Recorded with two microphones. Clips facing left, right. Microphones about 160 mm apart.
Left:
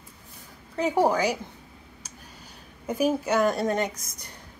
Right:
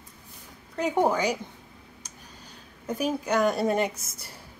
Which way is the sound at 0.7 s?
5° left (ahead or behind).